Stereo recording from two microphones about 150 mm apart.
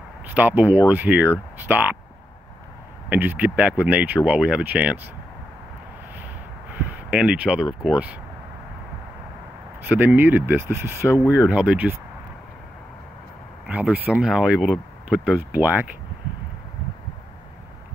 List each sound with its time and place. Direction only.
0.3 s speech: 10° right (ahead or behind)
3.1 s speech: 10° right (ahead or behind)
7.1 s speech: 5° right (ahead or behind)
9.8 s speech: 10° right (ahead or behind)
11.1 s speech: 20° left (ahead or behind)
11.3 s speech: 10° right (ahead or behind)
13.7 s speech: 10° right (ahead or behind)